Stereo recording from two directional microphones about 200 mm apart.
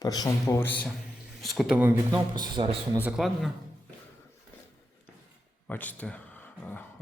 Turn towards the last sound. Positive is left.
turn(degrees=10)  # may be behind; listen again after turning